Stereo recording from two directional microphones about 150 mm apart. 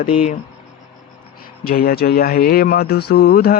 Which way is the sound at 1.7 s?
85° left.